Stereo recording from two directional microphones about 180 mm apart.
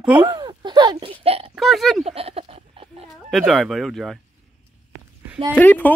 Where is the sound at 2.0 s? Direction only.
35° right (ahead or behind).